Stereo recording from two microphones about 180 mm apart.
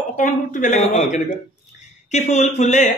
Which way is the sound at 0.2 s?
45° left (ahead or behind).